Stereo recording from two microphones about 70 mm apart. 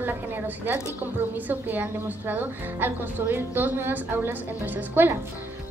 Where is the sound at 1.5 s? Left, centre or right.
Right.